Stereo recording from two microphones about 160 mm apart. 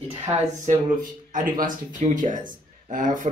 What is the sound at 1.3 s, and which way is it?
Speech, 55° right (ahead or behind).